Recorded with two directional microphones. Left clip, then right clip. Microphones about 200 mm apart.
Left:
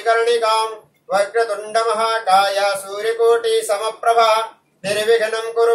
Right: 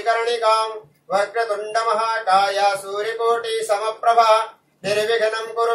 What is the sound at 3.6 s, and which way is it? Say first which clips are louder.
Music: left 1 dB; 20° left (ahead or behind).